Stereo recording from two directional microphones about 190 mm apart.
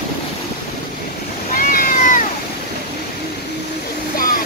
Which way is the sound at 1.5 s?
50° left (ahead or behind).